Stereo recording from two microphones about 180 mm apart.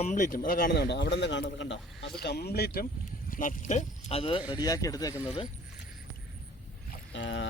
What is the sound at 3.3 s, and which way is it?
Speech, 50° left (ahead or behind).